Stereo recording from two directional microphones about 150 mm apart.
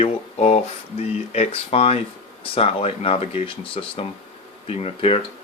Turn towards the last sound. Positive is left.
turn(degrees=40)  # may be behind; listen again after turning